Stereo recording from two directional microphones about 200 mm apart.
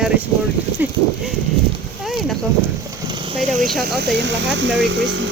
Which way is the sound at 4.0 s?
60° right (ahead or behind).